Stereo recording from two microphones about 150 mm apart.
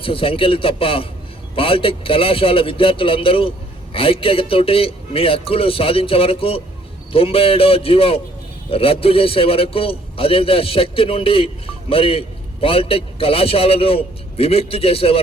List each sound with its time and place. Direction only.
0.0 s a man's voice: 40° left (ahead or behind)